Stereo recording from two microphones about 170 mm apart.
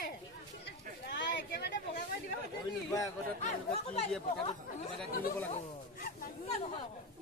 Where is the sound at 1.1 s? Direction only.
90° left.